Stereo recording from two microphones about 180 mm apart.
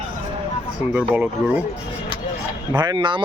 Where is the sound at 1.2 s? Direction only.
10° right (ahead or behind).